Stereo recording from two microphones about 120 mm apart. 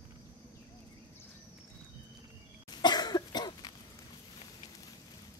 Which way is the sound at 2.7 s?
35° left (ahead or behind).